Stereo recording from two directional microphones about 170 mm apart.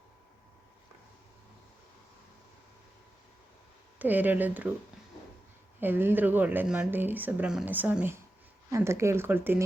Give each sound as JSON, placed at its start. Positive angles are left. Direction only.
{"t": 3.9, "sound": "speech", "side_deg": -10}
{"t": 5.8, "sound": "speech", "side_deg": -10}